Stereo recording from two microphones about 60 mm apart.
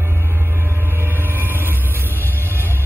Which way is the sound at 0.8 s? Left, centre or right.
Right.